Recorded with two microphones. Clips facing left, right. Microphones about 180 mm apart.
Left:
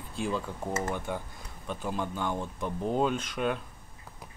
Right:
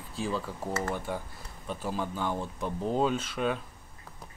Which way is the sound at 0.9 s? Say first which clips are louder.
Even; 5° right (ahead or behind).